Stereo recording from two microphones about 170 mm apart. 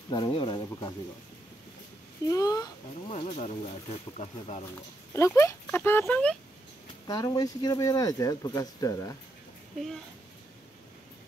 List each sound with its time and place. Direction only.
0.1 s speech: 30° left (ahead or behind)
2.2 s speech: 20° left (ahead or behind)
3.1 s speech: 35° left (ahead or behind)
5.1 s speech: 15° left (ahead or behind)
7.1 s speech: 20° left (ahead or behind)